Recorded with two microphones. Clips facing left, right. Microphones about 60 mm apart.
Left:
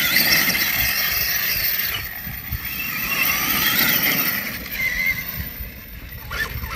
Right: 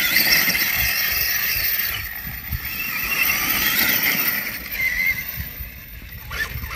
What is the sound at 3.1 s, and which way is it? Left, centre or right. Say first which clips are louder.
Neigh: even; right.